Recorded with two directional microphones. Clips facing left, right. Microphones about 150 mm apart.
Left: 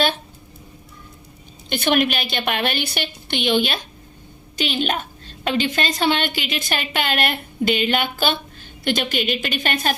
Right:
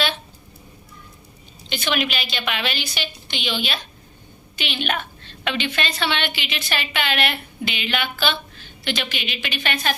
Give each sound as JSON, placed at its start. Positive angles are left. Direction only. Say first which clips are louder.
{"t": 1.7, "sound": "a woman's voice", "louder": "left 5 dB", "side_deg": 50}
{"t": 4.5, "sound": "a sound", "louder": "left 4 dB", "side_deg": 40}
{"t": 5.5, "sound": "a woman's voice", "louder": "left 4 dB", "side_deg": 40}